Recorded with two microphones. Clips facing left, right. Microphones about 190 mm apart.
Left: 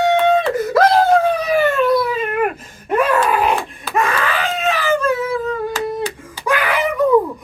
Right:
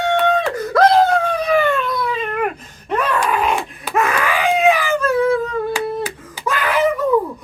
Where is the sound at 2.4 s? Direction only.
5° left (ahead or behind).